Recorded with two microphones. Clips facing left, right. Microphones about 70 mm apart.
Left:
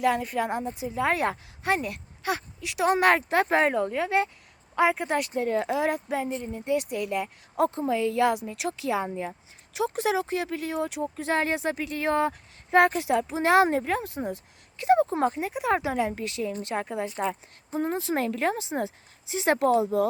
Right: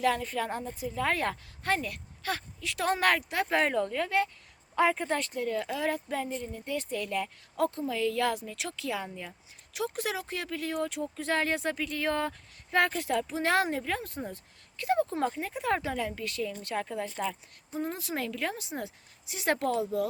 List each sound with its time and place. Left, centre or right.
0.0 s speech: centre
3.2 s speech: left
3.6 s speech: centre
4.7 s speech: centre
5.3 s speech: left
13.7 s speech: left
13.9 s speech: left